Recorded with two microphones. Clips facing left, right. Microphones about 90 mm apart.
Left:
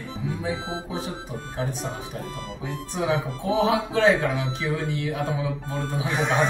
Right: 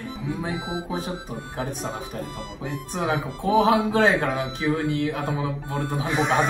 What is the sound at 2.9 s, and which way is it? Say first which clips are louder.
Speech: left 1 dB; 50° right (ahead or behind).